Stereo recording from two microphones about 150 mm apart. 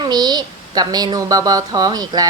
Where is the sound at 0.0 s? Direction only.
25° right (ahead or behind).